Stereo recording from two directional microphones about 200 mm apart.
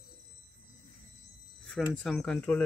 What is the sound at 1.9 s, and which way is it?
Speech, centre (ahead or behind).